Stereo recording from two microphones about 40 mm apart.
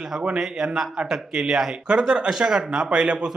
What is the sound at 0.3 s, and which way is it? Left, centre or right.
Speech, centre.